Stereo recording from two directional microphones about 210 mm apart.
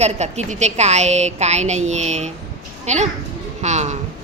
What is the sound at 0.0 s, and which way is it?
A woman's voice, 35° right (ahead or behind).